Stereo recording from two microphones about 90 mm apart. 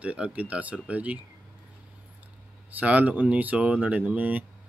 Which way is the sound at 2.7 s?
15° right (ahead or behind).